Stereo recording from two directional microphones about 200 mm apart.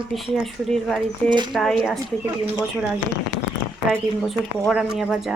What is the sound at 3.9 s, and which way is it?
Speech, centre (ahead or behind).